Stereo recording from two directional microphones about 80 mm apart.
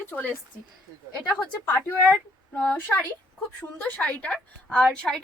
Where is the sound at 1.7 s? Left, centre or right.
Left.